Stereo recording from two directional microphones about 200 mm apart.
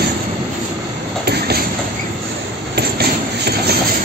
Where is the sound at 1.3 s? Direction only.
55° right (ahead or behind).